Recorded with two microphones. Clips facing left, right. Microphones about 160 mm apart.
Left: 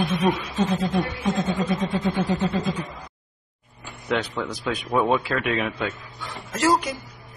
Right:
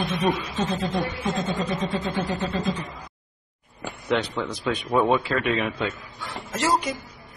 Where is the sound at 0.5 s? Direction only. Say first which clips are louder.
Left 3 dB; 5° left (ahead or behind).